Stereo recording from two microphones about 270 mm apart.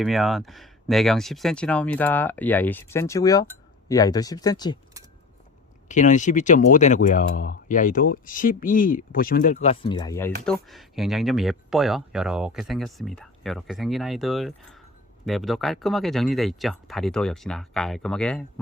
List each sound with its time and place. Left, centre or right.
0.0 s speech: centre
5.9 s speech: left; by 18.6 s centre